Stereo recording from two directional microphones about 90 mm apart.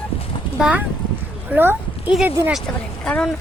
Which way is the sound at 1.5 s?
20° right (ahead or behind).